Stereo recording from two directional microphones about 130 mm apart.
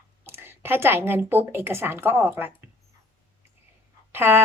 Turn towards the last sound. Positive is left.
turn(degrees=-15)  # may be behind; listen again after turning